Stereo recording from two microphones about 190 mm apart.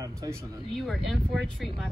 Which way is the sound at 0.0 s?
15° right (ahead or behind).